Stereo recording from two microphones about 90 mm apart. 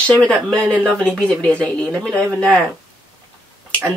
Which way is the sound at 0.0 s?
10° left (ahead or behind).